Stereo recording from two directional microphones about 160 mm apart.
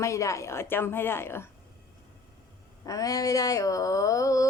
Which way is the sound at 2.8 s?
20° left (ahead or behind).